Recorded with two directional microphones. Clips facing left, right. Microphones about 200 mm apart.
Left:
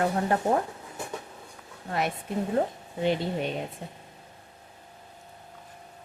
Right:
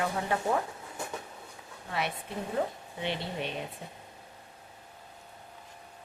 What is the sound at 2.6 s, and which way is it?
Speech, 40° left (ahead or behind).